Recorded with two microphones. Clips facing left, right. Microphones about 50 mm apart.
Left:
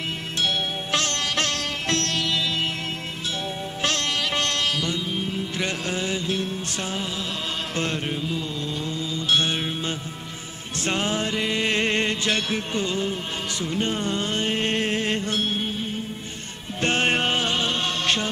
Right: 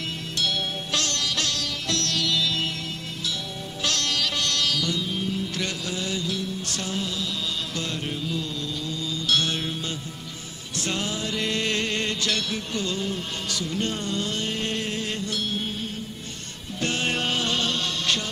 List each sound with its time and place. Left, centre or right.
0.4 s sitar: left
3.8 s music: left
6.8 s music: left
7.7 s mantra: left
8.1 s music: left
8.8 s mantra: left
10.8 s music: left
11.3 s music: centre; by 15.6 s left
16.8 s music: left